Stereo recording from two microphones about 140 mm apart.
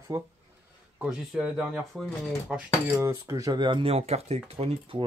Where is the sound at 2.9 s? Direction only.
20° right (ahead or behind); by 5.1 s 40° right (ahead or behind).